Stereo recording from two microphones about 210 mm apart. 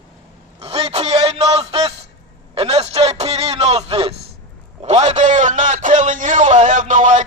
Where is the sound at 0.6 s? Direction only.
30° right (ahead or behind).